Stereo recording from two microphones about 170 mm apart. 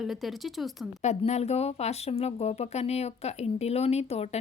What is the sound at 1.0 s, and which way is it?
Speech, 40° left (ahead or behind).